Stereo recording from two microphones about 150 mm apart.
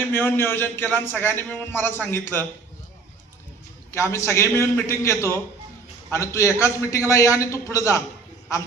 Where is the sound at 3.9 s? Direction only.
20° left (ahead or behind).